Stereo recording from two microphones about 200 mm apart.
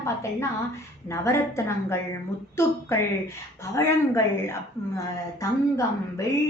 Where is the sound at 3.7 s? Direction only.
15° left (ahead or behind).